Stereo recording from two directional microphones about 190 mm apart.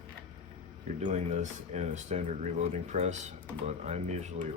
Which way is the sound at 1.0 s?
35° right (ahead or behind).